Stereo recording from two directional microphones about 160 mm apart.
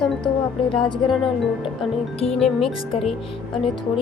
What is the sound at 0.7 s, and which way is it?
Speech, 30° left (ahead or behind).